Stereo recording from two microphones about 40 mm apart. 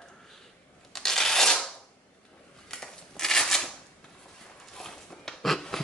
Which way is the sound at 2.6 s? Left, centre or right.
Centre.